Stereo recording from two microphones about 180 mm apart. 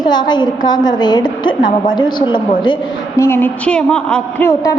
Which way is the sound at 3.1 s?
15° left (ahead or behind).